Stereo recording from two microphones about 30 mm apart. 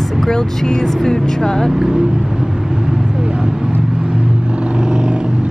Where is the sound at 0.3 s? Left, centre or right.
Left.